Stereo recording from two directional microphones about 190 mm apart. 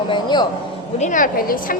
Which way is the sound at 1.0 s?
45° left (ahead or behind).